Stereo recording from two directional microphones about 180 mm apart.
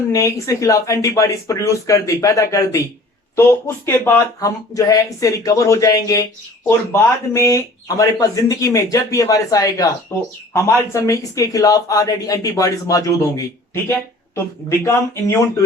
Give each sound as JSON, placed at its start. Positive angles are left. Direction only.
{"t": 0.1, "sound": "speech", "side_deg": 15}
{"t": 3.8, "sound": "speech", "side_deg": 15}